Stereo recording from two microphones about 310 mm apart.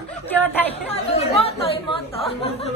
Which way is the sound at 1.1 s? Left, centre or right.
Centre.